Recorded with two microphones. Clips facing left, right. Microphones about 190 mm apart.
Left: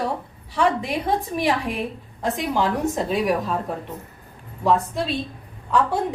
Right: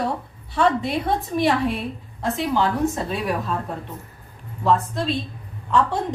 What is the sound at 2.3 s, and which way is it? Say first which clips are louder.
A woman's voice: right 1 dB; 15° left (ahead or behind).